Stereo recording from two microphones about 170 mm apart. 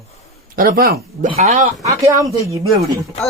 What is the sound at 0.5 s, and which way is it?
Speech, 60° right (ahead or behind).